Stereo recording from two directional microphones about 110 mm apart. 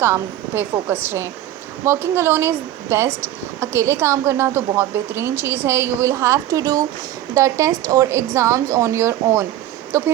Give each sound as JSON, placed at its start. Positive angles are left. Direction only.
{"t": 0.0, "sound": "speech", "side_deg": -20}